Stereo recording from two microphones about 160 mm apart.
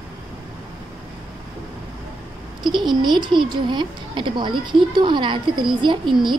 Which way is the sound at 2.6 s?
30° right (ahead or behind).